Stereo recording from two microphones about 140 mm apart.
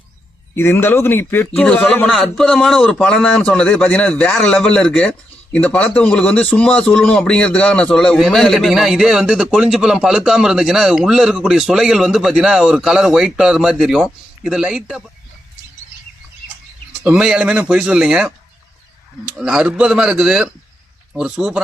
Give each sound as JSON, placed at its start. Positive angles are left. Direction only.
{"t": 0.5, "sound": "a man's voice", "side_deg": 15}
{"t": 17.0, "sound": "speech", "side_deg": -5}
{"t": 19.4, "sound": "a man's voice", "side_deg": -5}